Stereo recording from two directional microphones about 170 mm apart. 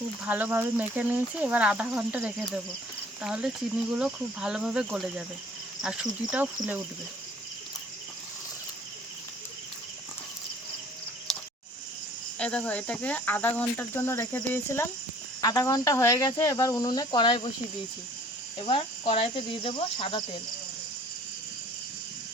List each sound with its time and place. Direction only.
0.3 s speech: 10° right (ahead or behind)
12.4 s speech: 5° left (ahead or behind); by 17.5 s 25° left (ahead or behind)
18.6 s speech: 30° left (ahead or behind)